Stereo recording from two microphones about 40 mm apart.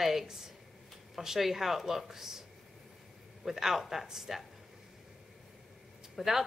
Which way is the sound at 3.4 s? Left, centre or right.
Centre.